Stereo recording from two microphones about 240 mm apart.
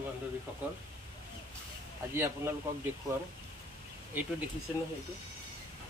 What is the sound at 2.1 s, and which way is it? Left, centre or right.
Speech, centre.